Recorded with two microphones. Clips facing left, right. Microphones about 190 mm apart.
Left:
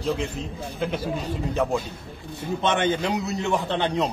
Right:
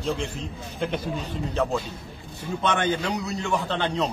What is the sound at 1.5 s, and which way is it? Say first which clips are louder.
A man's voice: left 1 dB; 15° left (ahead or behind).